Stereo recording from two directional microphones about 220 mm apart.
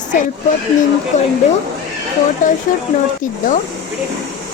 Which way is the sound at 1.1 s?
35° left (ahead or behind).